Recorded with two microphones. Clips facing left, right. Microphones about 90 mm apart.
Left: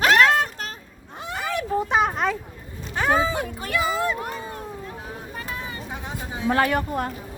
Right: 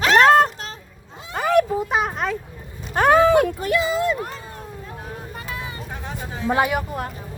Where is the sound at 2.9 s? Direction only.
60° right (ahead or behind).